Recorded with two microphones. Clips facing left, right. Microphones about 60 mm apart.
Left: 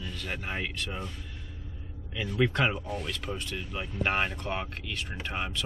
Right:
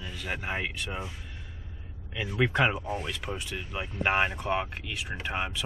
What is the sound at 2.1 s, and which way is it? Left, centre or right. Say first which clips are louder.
Speech: right 1 dB; centre.